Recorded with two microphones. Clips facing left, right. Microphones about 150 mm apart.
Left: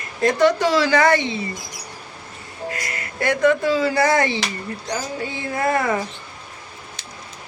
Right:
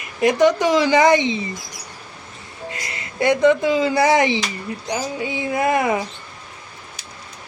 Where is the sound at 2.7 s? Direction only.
20° right (ahead or behind).